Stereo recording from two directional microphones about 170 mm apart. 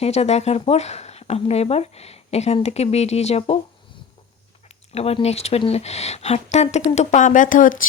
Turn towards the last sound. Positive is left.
turn(degrees=50)  # may be behind; listen again after turning